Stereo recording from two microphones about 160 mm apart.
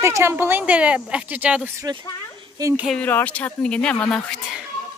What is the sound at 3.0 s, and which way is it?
Speech, 10° left (ahead or behind).